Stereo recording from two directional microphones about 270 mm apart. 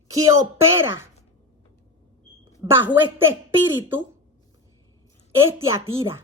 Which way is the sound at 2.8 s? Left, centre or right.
Centre.